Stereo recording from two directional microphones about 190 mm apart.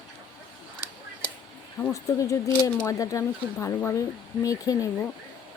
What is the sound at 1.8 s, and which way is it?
Speech, 15° left (ahead or behind).